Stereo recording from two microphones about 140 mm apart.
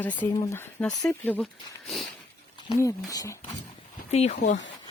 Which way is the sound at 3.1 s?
25° left (ahead or behind).